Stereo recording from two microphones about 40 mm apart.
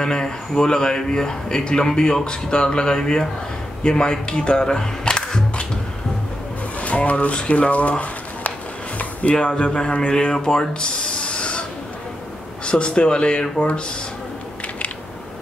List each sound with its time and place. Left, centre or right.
0.0 s speech: centre
4.3 s speech: left
4.6 s camera: centre
6.8 s speech: left
8.0 s a sound: left
9.3 s speech: left
12.6 s speech: left